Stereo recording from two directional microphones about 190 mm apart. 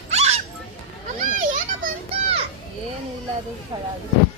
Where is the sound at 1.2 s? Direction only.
45° right (ahead or behind).